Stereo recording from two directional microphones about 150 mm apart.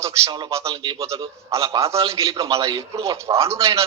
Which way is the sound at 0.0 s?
30° right (ahead or behind).